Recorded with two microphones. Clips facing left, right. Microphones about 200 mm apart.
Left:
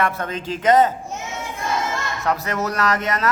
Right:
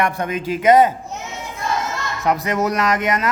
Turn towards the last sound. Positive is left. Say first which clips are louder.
# right 2 dB
turn(degrees=-15)  # may be behind; listen again after turning